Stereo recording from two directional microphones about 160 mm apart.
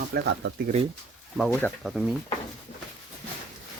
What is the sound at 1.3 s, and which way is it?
Speech, centre (ahead or behind).